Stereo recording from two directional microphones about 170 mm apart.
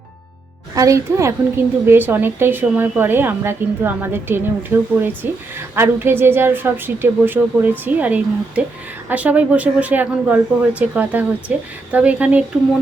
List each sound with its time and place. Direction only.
0.8 s a woman's voice: 20° right (ahead or behind)